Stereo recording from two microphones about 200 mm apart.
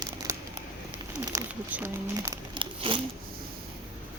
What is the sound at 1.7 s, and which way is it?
Speech, 15° right (ahead or behind).